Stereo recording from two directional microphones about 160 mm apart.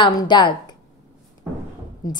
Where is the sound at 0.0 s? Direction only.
30° left (ahead or behind).